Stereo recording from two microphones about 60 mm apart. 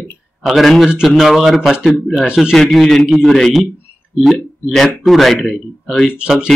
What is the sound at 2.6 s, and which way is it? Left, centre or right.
A man's voice, centre.